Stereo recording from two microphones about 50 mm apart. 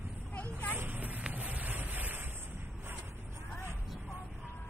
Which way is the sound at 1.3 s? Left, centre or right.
Right.